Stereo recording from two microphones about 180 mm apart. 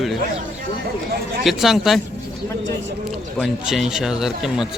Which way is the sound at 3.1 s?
Centre (ahead or behind).